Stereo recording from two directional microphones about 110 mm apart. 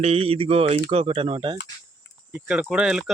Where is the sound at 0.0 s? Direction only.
60° right (ahead or behind).